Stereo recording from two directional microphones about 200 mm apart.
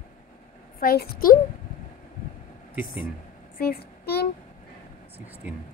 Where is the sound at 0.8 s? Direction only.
45° left (ahead or behind).